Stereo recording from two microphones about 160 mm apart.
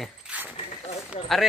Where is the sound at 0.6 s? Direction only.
40° left (ahead or behind).